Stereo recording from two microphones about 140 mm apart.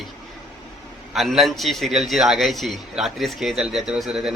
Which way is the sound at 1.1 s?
Centre (ahead or behind).